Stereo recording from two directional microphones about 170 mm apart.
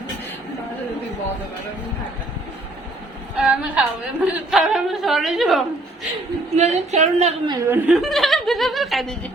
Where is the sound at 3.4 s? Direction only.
5° right (ahead or behind).